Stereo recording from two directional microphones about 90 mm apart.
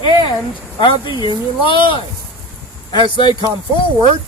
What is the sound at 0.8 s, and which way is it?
Speech, 65° left (ahead or behind).